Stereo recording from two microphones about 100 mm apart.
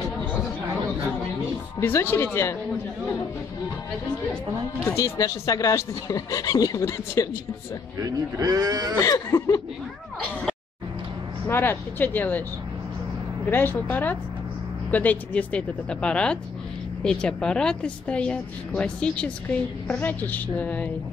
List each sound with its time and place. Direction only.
1.8 s speech: 25° left (ahead or behind)
4.9 s speech: 35° left (ahead or behind)
8.0 s speech: 40° right (ahead or behind)
9.0 s speech: 35° left (ahead or behind)
11.4 s speech: 25° left (ahead or behind)
13.5 s speech: 20° left (ahead or behind)